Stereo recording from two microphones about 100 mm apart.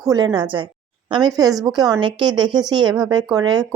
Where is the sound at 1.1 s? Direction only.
45° right (ahead or behind).